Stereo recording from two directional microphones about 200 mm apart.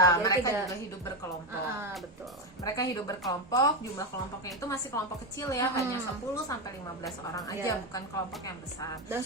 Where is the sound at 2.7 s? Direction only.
15° left (ahead or behind).